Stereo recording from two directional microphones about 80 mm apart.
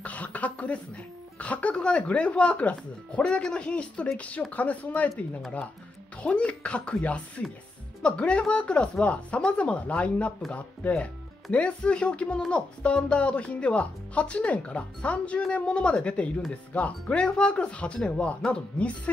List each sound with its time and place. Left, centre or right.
0.0 s a sound: centre
1.4 s speech: centre
6.2 s speech: centre